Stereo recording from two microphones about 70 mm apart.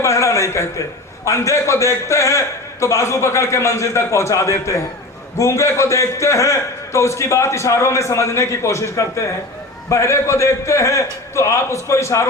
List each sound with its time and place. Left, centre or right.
0.0 s a sound: left
1.2 s a man's voice: left
9.9 s a man's voice: left